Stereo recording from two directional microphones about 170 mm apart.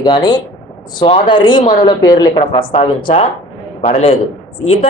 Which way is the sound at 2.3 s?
35° left (ahead or behind).